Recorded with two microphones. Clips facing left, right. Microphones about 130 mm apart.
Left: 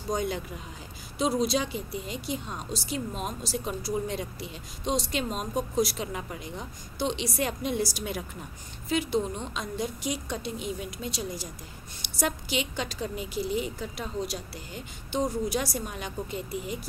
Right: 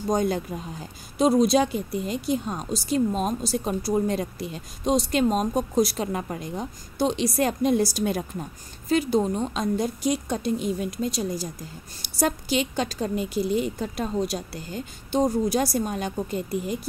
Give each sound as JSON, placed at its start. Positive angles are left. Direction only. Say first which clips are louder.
{"t": 0.1, "sound": "a woman's voice", "louder": "right 6 dB", "side_deg": -45}